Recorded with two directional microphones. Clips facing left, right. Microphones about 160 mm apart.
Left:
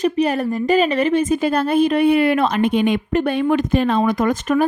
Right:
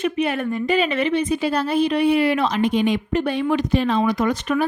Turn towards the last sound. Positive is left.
turn(degrees=45)  # may be behind; listen again after turning